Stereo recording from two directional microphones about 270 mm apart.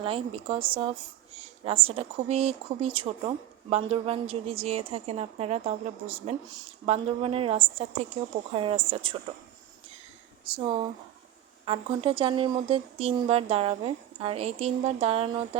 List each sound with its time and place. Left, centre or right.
0.0 s speech: centre
10.5 s speech: centre